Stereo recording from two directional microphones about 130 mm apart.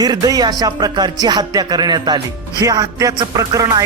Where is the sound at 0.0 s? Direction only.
30° right (ahead or behind).